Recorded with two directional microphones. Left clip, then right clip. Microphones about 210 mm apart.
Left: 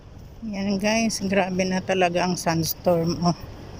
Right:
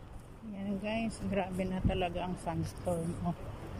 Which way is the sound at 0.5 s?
20° left (ahead or behind).